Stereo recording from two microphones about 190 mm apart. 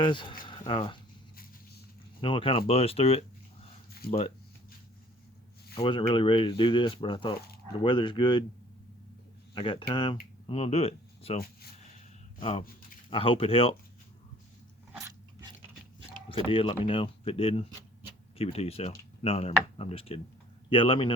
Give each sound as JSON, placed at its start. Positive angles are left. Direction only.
{"t": 0.0, "sound": "speech", "side_deg": 25}
{"t": 0.4, "sound": "a sound", "side_deg": 25}
{"t": 2.2, "sound": "speech", "side_deg": 25}
{"t": 4.0, "sound": "speech", "side_deg": 55}
{"t": 5.8, "sound": "speech", "side_deg": 25}
{"t": 9.6, "sound": "speech", "side_deg": 25}
{"t": 12.4, "sound": "speech", "side_deg": 30}
{"t": 16.3, "sound": "speech", "side_deg": 30}